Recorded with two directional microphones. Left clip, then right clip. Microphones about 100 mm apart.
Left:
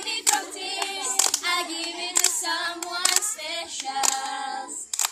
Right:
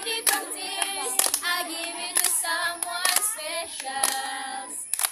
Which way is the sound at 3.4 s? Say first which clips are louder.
Left 1 dB; 30° right (ahead or behind).